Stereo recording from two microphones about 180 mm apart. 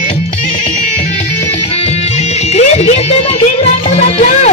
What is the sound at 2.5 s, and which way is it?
Music, 40° left (ahead or behind).